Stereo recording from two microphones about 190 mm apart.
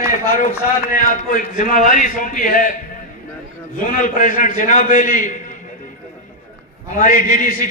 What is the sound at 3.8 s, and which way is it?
A man's voice, 45° left (ahead or behind).